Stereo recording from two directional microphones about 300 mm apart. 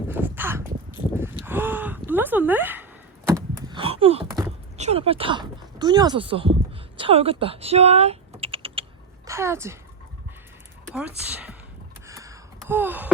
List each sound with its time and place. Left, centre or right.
0.1 s a sound: centre
3.7 s a sound: centre
7.0 s a woman's voice: centre
8.3 s typing: centre
9.2 s a woman's voice: centre
10.8 s speech: centre
12.0 s gasp: centre